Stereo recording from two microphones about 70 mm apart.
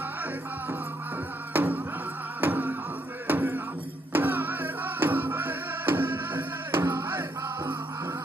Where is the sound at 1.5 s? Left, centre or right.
Right.